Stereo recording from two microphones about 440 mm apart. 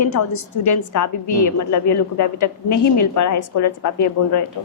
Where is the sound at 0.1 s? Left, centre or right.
Left.